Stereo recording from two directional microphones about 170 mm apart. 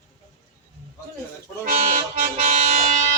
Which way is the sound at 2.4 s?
45° right (ahead or behind).